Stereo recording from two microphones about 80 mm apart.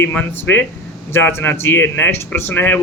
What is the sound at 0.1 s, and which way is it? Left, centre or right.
Speech, centre.